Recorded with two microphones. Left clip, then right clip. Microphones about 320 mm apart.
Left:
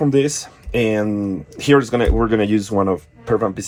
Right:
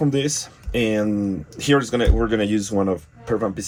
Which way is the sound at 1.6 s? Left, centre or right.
Centre.